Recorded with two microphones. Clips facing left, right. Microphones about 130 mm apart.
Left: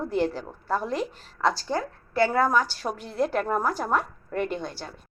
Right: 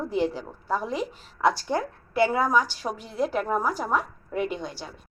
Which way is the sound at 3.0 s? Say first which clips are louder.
Left 1 dB; 5° right (ahead or behind).